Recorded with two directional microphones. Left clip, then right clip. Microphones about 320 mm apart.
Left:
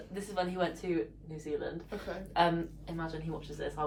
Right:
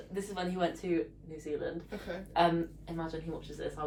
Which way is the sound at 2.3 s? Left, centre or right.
Centre.